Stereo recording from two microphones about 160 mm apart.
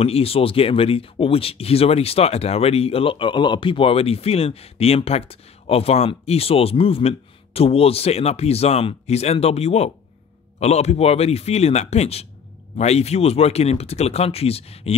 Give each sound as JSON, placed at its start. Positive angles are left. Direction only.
{"t": 0.0, "sound": "speech", "side_deg": 40}